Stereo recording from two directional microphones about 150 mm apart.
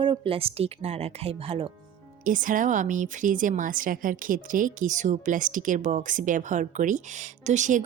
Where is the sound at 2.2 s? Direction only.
60° right (ahead or behind).